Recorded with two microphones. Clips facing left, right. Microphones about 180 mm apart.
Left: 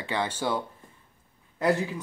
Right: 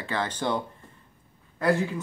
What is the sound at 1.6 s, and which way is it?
Speech, 15° left (ahead or behind).